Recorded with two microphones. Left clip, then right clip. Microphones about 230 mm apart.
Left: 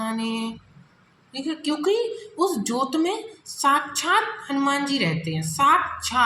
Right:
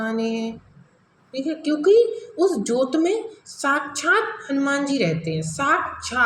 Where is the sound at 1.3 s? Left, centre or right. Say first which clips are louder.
Right 3 dB; left.